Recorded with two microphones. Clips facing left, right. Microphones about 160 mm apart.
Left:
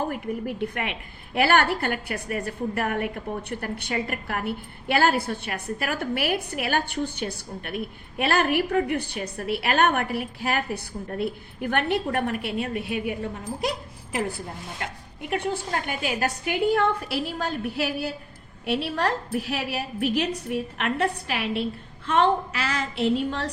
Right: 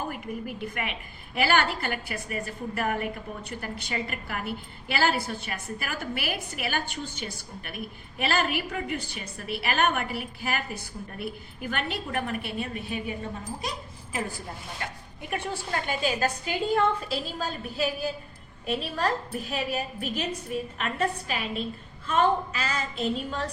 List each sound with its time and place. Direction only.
0.1 s a woman's voice: 60° left (ahead or behind)
15.3 s a woman's voice: 60° left (ahead or behind)
22.0 s a sound: 80° left